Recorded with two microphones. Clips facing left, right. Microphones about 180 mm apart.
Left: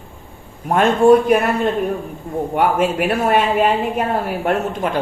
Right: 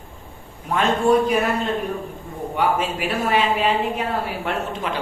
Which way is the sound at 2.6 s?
55° left (ahead or behind).